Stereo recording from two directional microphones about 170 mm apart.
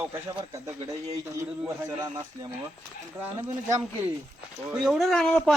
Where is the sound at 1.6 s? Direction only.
20° right (ahead or behind).